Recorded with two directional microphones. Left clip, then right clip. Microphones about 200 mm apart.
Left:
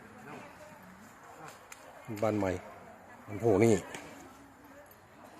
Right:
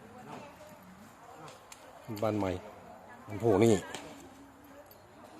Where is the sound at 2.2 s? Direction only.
10° left (ahead or behind).